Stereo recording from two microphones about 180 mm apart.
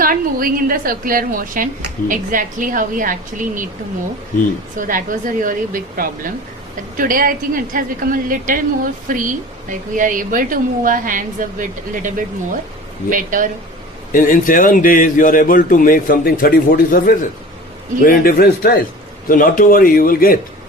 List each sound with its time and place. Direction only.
0.0 s a woman's voice: 50° right (ahead or behind)
4.8 s a woman's voice: 50° right (ahead or behind)
14.1 s a man's voice: 50° left (ahead or behind)